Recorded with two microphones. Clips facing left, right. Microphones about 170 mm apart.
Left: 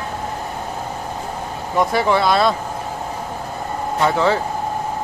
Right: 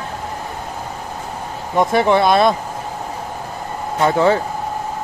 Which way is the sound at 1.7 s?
20° right (ahead or behind).